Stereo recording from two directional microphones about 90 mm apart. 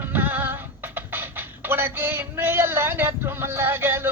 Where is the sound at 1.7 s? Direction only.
25° right (ahead or behind).